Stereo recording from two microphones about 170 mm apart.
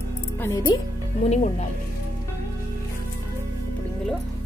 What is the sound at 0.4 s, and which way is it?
Speech, 15° left (ahead or behind).